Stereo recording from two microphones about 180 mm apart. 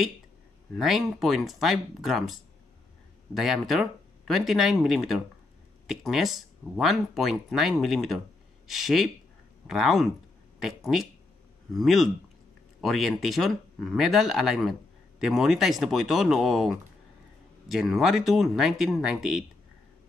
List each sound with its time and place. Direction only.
0.7 s speech: centre (ahead or behind)